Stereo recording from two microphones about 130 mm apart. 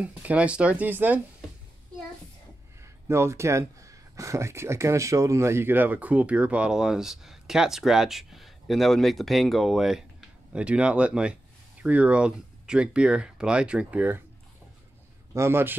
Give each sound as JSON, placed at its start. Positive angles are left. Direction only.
{"t": 0.0, "sound": "speech", "side_deg": -10}
{"t": 2.8, "sound": "speech", "side_deg": -20}
{"t": 15.3, "sound": "speech", "side_deg": -20}